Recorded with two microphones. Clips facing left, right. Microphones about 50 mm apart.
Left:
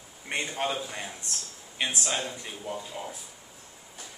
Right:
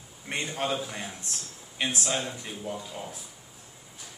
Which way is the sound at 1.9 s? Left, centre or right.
Centre.